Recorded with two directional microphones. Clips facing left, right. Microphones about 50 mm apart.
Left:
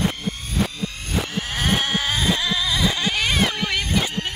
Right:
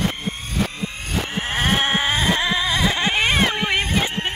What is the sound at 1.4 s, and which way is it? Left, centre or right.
Sheep, right.